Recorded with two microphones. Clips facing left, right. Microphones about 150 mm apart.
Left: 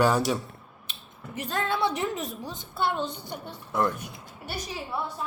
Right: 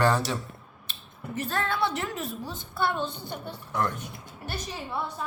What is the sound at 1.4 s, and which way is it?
A woman's voice, 20° left (ahead or behind).